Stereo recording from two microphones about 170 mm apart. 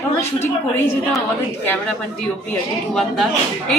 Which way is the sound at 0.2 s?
15° left (ahead or behind).